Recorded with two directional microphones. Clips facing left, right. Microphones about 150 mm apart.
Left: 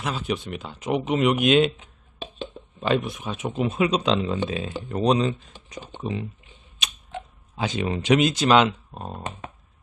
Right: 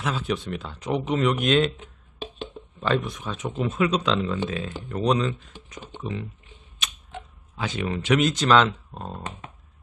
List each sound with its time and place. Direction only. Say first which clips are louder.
0.0 s speech: even; centre (ahead or behind)
2.8 s speech: left 1 dB; 15° left (ahead or behind)
7.5 s speech: left 2 dB; 20° left (ahead or behind)